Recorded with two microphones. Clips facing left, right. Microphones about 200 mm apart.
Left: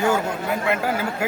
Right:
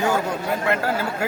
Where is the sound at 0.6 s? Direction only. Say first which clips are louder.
Even; 15° left (ahead or behind).